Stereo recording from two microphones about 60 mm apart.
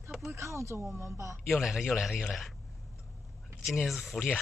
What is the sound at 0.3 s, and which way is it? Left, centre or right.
Speech, right.